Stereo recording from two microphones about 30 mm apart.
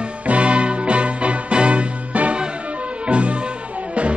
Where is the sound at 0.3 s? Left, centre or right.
Right.